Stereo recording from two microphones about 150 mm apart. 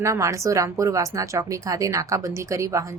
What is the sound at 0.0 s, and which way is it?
A woman's voice, 20° right (ahead or behind).